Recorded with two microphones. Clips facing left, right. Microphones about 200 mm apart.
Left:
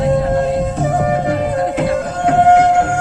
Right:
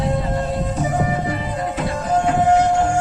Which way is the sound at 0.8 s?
65° left (ahead or behind).